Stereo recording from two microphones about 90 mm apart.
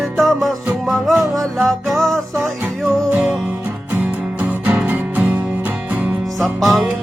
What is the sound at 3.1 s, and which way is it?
Music, 20° right (ahead or behind).